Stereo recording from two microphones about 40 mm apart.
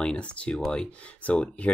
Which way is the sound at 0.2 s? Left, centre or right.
Left.